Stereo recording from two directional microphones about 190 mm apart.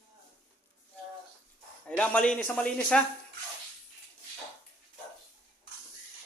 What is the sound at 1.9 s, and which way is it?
Speech, 5° left (ahead or behind).